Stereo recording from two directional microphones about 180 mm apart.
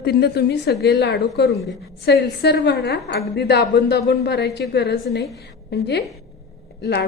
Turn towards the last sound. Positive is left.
turn(degrees=65)  # may be behind; listen again after turning